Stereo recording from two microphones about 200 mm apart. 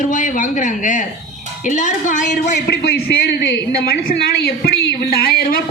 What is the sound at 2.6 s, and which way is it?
Speech, 55° left (ahead or behind).